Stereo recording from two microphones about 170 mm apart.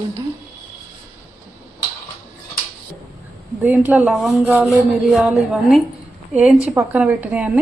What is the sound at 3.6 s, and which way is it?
A woman's voice, 10° right (ahead or behind).